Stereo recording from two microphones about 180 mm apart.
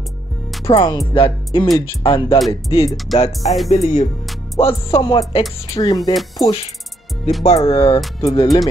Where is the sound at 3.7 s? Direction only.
40° left (ahead or behind).